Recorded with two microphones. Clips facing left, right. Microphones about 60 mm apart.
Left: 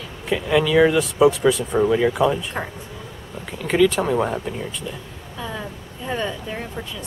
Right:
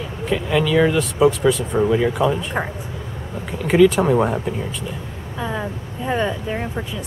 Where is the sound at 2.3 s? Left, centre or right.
Centre.